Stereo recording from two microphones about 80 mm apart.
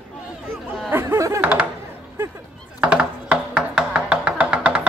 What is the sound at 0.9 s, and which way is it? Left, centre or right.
Chatter, right.